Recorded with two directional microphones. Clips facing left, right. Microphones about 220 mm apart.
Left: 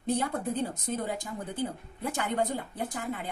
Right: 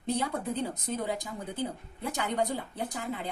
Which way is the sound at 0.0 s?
50° left (ahead or behind).